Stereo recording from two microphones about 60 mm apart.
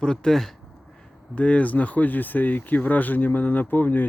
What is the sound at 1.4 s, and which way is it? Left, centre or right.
Speech, left.